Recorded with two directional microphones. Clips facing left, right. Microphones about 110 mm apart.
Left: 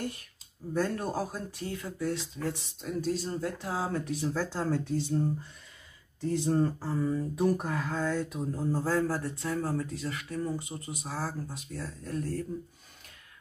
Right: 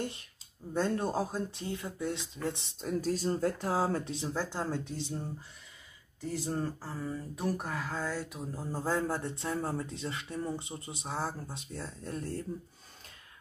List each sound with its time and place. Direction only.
0.0 s a sound: 25° right (ahead or behind)
0.7 s speech: 25° right (ahead or behind)
2.8 s speech: 40° right (ahead or behind); by 5.0 s 20° right (ahead or behind)
6.2 s speech: 5° right (ahead or behind)
8.8 s speech: 20° right (ahead or behind)